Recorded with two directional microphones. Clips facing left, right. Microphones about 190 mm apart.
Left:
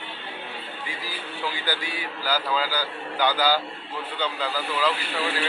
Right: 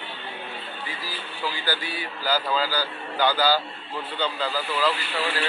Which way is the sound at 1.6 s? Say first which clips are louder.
Even; 10° left (ahead or behind).